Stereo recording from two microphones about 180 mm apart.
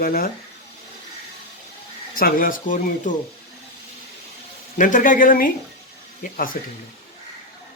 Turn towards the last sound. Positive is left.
turn(degrees=50)  # may be behind; listen again after turning